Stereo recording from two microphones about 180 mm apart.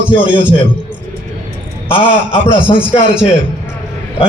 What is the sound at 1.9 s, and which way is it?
A man's voice, 30° left (ahead or behind).